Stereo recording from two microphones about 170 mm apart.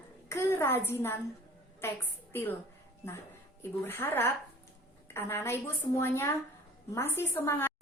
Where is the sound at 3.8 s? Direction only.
15° left (ahead or behind).